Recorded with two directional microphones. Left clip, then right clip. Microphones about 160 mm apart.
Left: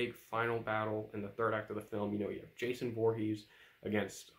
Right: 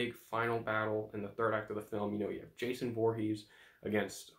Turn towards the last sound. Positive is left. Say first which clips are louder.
# right 2 dB
turn(degrees=20)  # may be behind; listen again after turning